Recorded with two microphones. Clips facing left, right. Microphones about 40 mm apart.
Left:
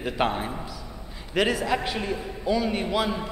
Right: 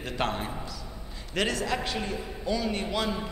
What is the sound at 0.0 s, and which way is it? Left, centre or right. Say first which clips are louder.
A man's voice: left 4 dB; centre.